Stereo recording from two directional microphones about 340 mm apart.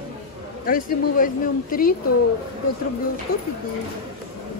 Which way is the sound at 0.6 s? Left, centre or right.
Left.